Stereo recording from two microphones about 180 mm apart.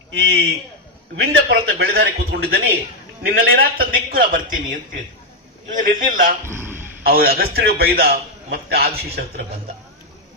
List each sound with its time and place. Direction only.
0.1 s a man's voice: 90° right; by 4.6 s 50° right (ahead or behind)
5.7 s a man's voice: 50° right (ahead or behind)
6.4 s a sound: 15° right (ahead or behind)
7.0 s a man's voice: 55° right (ahead or behind)